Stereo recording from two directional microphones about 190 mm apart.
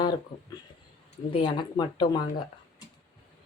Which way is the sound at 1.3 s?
25° left (ahead or behind).